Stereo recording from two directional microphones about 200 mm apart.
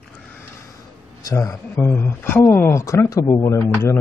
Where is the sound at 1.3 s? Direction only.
15° left (ahead or behind).